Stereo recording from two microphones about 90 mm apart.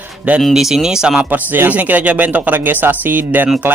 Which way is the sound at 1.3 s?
20° right (ahead or behind).